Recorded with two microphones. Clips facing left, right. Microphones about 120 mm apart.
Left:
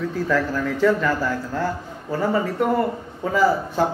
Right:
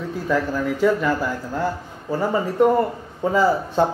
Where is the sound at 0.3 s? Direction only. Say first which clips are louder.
Right 2 dB; 15° right (ahead or behind).